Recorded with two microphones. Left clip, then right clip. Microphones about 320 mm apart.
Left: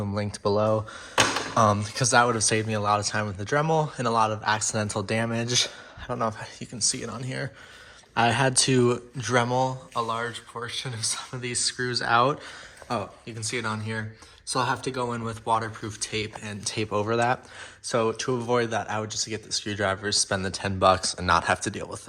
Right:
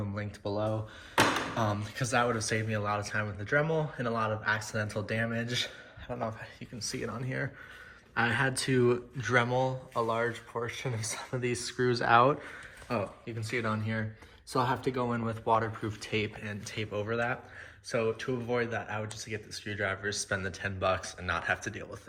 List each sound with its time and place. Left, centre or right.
0.1 s speech: centre
0.4 s speech: left
1.5 s speech: left
6.7 s speech: centre